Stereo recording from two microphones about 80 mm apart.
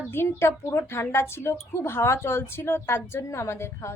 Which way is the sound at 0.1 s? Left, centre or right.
Left.